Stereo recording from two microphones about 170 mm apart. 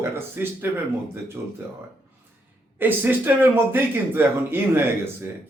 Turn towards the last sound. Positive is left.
turn(degrees=-15)  # may be behind; listen again after turning